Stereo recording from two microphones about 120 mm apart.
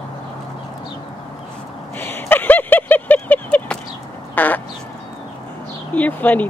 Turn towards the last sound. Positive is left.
turn(degrees=15)  # may be behind; listen again after turning